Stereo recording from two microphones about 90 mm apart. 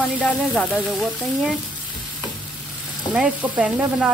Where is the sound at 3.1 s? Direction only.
10° right (ahead or behind).